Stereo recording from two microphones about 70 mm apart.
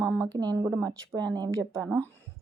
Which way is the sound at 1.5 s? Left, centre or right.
Right.